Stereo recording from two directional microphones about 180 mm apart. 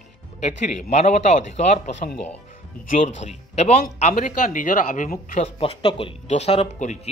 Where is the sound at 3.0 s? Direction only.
35° left (ahead or behind).